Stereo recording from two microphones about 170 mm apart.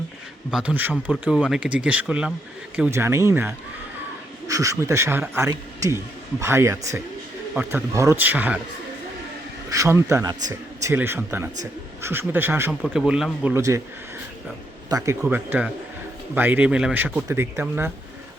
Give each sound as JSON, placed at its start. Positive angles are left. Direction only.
{"t": 0.5, "sound": "a man's voice", "side_deg": -10}
{"t": 9.6, "sound": "a man's voice", "side_deg": -20}
{"t": 12.8, "sound": "speech", "side_deg": 0}
{"t": 13.5, "sound": "a man's voice", "side_deg": -15}
{"t": 14.8, "sound": "a man's voice", "side_deg": -20}